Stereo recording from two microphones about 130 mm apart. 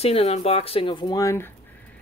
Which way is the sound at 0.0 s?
50° left (ahead or behind).